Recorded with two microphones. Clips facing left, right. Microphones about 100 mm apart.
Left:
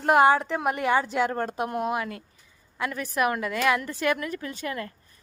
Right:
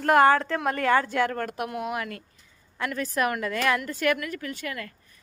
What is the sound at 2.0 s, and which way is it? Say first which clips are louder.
A woman's voice: left 2 dB; 20° left (ahead or behind).